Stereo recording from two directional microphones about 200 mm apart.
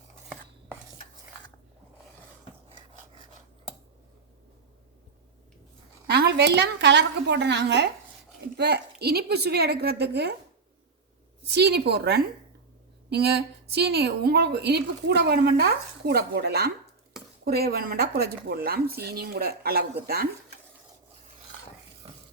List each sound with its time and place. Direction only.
6.1 s a woman's voice: 55° right (ahead or behind)
11.4 s a woman's voice: 55° right (ahead or behind)